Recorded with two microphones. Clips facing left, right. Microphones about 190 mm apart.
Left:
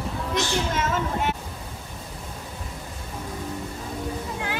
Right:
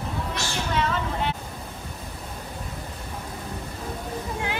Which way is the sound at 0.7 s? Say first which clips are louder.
Even; 45° left (ahead or behind).